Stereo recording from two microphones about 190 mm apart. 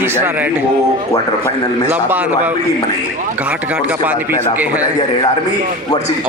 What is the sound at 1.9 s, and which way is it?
Speech, 10° right (ahead or behind).